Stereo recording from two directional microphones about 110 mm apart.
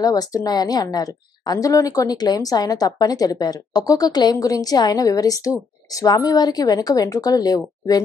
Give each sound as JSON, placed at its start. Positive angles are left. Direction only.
{"t": 0.0, "sound": "a woman's voice", "side_deg": 35}